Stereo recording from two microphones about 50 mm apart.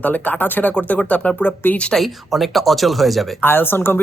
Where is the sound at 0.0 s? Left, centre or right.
Left.